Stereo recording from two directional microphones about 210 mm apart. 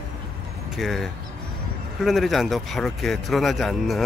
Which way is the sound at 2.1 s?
Centre (ahead or behind).